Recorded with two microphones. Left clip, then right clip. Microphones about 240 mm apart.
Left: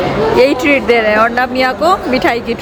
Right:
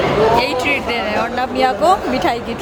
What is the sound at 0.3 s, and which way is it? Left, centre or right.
A woman's voice, centre.